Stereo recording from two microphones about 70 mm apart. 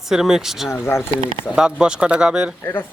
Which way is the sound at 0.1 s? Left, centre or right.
Centre.